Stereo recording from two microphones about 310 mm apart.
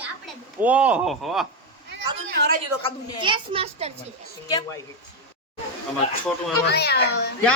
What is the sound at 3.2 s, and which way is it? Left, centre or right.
Speech, centre.